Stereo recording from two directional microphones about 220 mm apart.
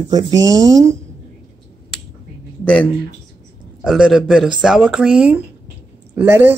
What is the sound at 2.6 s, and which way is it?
Speech, 5° left (ahead or behind).